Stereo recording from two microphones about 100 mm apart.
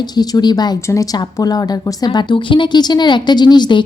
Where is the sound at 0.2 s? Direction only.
40° left (ahead or behind).